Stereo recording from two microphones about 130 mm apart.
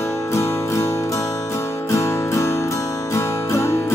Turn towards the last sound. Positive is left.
turn(degrees=20)  # may be behind; listen again after turning